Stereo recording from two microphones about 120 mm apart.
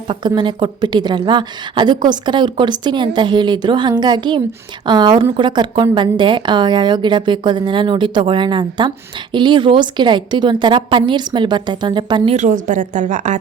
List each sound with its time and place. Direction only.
0.1 s a woman's voice: 40° right (ahead or behind)
12.3 s a woman's voice: 85° right